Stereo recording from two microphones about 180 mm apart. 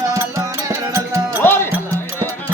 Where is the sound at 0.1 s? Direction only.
15° right (ahead or behind).